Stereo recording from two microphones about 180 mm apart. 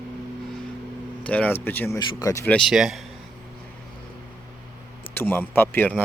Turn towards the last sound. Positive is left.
turn(degrees=10)  # may be behind; listen again after turning